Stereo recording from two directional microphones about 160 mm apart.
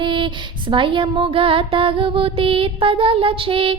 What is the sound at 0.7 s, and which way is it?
Music, 30° right (ahead or behind).